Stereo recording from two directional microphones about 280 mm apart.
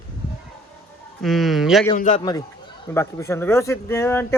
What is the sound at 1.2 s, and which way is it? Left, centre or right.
Speech, centre.